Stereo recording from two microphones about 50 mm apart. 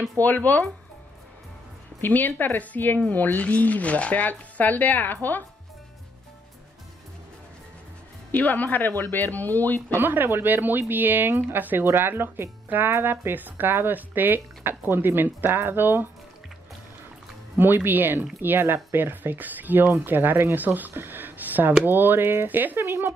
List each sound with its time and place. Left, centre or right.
0.2 s speech: left
2.0 s speech: left
8.3 s speech: left
9.9 s speech: right
17.6 s speech: right
18.9 s speech: right